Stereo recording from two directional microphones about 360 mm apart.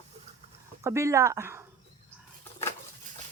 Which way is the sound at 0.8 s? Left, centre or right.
Centre.